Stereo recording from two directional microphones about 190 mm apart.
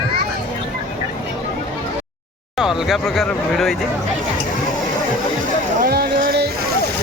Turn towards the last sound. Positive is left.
turn(degrees=-55)  # may be behind; listen again after turning